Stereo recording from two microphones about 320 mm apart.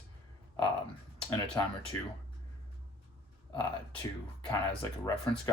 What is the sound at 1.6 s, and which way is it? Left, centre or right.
Speech, centre.